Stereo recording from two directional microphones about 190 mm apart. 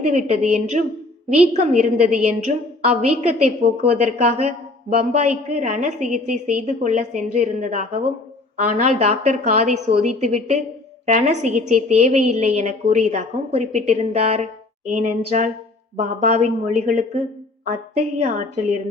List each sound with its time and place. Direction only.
0.1 s a woman's voice: 35° right (ahead or behind)
2.0 s a woman's voice: 40° right (ahead or behind)